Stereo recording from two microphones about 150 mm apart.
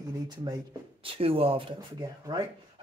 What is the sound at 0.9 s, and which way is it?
Speech, 40° right (ahead or behind).